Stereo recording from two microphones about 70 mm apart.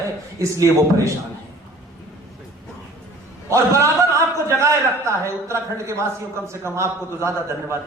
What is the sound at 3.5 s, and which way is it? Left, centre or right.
A woman's voice, right.